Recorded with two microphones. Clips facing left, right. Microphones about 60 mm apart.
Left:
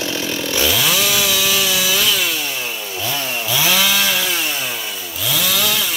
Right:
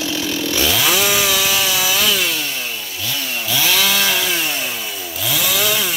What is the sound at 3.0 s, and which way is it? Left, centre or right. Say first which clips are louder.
Chainsaw: left 2 dB; left.